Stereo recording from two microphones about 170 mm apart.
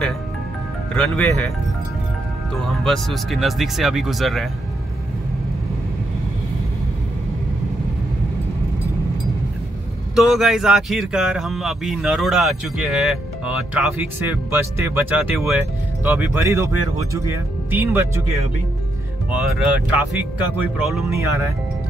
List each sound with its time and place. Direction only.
0.9 s speech: 5° left (ahead or behind)
2.8 s speech: centre (ahead or behind)
10.1 s speech: centre (ahead or behind)